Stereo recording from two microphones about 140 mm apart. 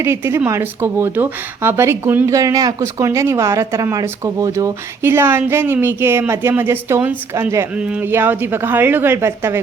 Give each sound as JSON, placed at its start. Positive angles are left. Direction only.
{"t": 0.0, "sound": "speech", "side_deg": -20}
{"t": 7.8, "sound": "speech", "side_deg": -10}